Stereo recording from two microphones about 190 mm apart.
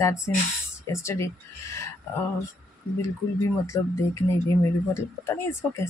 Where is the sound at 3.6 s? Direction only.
15° left (ahead or behind).